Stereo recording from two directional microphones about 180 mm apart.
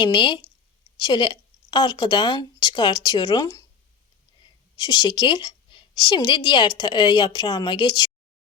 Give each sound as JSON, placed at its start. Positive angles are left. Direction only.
{"t": 0.0, "sound": "a woman's voice", "side_deg": 25}
{"t": 4.8, "sound": "a woman's voice", "side_deg": 25}